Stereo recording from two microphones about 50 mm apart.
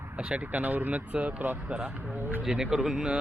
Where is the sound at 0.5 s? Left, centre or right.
Right.